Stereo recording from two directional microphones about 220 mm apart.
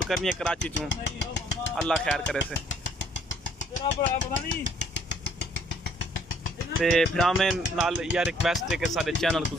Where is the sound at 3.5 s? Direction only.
35° left (ahead or behind).